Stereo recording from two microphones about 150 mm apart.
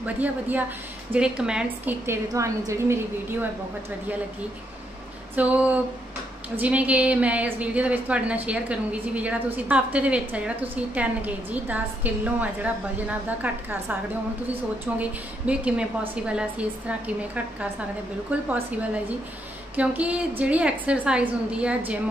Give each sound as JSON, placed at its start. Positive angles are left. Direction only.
{"t": 0.0, "sound": "a woman's voice", "side_deg": -10}
{"t": 2.0, "sound": "a woman's voice", "side_deg": -20}
{"t": 5.3, "sound": "a woman's voice", "side_deg": -10}
{"t": 15.0, "sound": "a woman's voice", "side_deg": -10}
{"t": 18.5, "sound": "a woman's voice", "side_deg": -10}